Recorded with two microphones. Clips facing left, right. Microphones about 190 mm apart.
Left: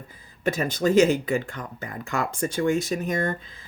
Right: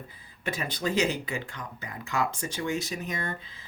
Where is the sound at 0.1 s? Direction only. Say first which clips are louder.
Left 9 dB; 45° left (ahead or behind).